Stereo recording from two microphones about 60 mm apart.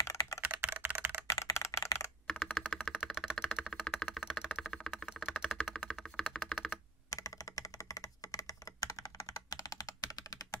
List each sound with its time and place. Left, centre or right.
0.4 s computer keyboard: right
1.3 s a sound: left
2.2 s computer keyboard: centre
3.0 s typing: centre
4.3 s a sound: centre
4.6 s a sound: centre
5.2 s typing: centre
5.6 s computer keyboard: centre
7.1 s computer keyboard: left